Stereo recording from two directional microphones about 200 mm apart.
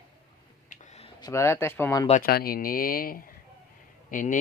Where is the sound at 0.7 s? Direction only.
35° left (ahead or behind).